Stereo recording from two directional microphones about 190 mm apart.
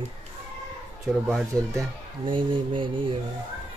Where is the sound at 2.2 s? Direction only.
25° right (ahead or behind).